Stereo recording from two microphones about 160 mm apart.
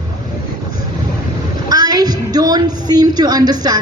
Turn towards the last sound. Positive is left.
turn(degrees=-25)  # may be behind; listen again after turning